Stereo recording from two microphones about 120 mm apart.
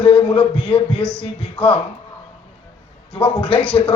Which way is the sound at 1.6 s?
10° left (ahead or behind).